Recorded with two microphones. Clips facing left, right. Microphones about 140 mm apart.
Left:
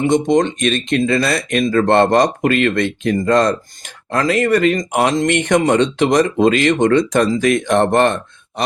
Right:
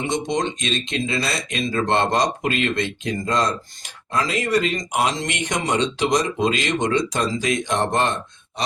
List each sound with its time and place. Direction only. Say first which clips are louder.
0.0 s speech: left 9 dB; 55° left (ahead or behind)
8.6 s groan: left 5 dB; 55° left (ahead or behind)